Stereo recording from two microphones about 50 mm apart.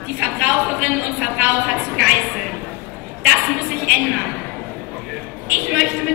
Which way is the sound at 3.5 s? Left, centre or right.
Right.